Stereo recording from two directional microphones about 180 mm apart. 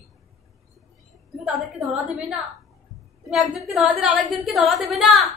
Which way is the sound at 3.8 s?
5° right (ahead or behind).